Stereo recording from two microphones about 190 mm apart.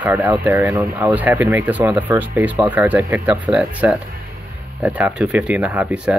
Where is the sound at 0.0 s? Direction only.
10° right (ahead or behind).